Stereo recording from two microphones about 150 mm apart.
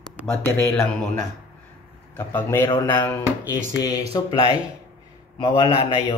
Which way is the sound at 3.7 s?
25° left (ahead or behind).